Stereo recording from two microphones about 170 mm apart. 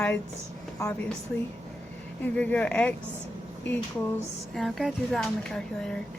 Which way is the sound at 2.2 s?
10° left (ahead or behind).